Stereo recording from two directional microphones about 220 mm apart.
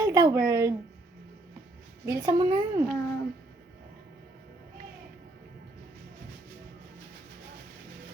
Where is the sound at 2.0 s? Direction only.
15° right (ahead or behind).